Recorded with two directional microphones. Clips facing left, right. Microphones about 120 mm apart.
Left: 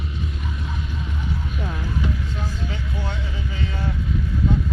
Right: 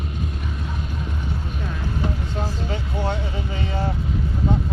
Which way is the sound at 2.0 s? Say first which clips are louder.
Right 4 dB; 35° right (ahead or behind).